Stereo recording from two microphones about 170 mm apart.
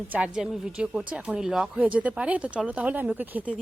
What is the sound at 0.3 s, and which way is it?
A woman's voice, 5° right (ahead or behind).